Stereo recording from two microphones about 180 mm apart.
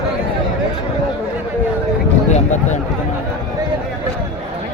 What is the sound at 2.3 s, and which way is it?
Speech, 40° left (ahead or behind).